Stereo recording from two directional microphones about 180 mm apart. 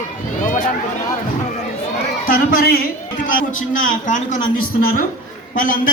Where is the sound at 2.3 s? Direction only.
55° left (ahead or behind).